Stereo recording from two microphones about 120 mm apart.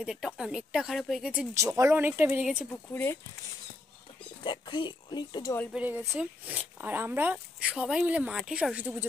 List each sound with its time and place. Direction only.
0.0 s speech: 5° right (ahead or behind)
1.5 s speech: 25° right (ahead or behind)
2.7 s speech: 20° left (ahead or behind)
4.5 s speech: 40° left (ahead or behind)
5.8 s speech: 15° right (ahead or behind)
7.7 s speech: 5° right (ahead or behind)